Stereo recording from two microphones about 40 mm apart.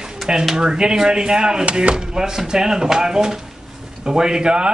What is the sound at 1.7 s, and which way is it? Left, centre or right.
Speech, right.